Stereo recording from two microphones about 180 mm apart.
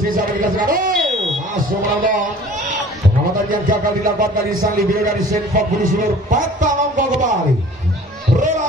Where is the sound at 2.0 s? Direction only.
45° right (ahead or behind).